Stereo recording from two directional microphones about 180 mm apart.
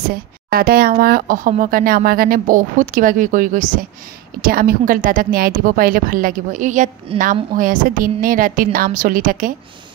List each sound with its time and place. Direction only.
0.1 s speech: 55° right (ahead or behind)
7.1 s a woman's voice: 30° right (ahead or behind)
7.5 s speech: 50° right (ahead or behind)